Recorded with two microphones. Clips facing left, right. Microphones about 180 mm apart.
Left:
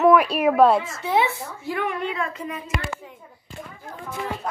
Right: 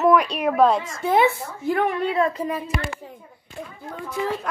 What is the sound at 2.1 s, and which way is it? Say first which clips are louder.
Speech: right 7 dB; 35° right (ahead or behind).